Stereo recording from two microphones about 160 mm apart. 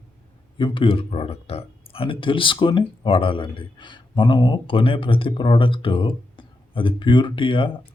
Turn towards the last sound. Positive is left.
turn(degrees=30)  # may be behind; listen again after turning